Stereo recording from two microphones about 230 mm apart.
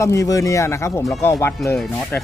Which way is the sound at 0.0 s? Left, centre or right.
Centre.